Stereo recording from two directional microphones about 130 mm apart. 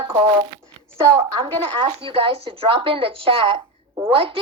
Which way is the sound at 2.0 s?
45° right (ahead or behind).